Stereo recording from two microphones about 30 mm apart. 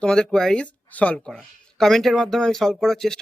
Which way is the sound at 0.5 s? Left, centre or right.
Left.